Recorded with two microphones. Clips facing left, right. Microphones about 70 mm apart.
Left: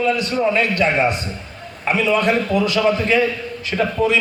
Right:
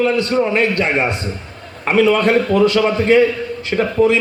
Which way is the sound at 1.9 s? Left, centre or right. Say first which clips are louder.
Right 4 dB; right.